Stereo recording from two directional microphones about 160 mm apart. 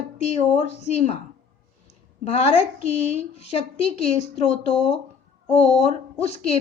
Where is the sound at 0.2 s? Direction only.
45° left (ahead or behind).